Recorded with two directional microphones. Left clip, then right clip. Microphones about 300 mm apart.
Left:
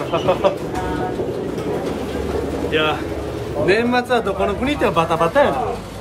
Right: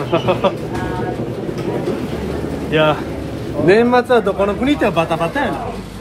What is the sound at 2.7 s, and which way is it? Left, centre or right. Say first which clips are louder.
Speech: right 5 dB; centre.